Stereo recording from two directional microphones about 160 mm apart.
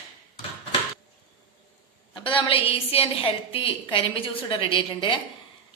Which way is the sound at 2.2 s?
35° left (ahead or behind).